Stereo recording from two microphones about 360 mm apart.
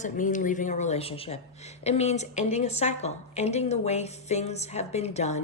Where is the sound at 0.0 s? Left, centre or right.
Left.